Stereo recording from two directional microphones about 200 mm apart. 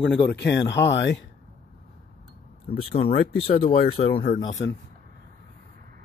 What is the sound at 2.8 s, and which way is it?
Speech, 30° left (ahead or behind).